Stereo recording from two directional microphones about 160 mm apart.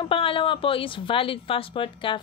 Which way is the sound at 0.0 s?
35° left (ahead or behind).